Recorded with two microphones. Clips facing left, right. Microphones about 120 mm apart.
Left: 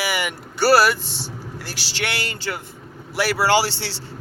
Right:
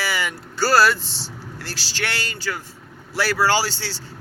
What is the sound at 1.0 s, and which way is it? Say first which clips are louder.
Speech: left 3 dB; 55° left (ahead or behind).